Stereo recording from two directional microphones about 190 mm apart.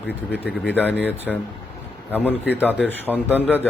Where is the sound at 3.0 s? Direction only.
10° left (ahead or behind).